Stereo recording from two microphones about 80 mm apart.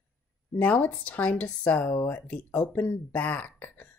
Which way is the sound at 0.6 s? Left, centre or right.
Centre.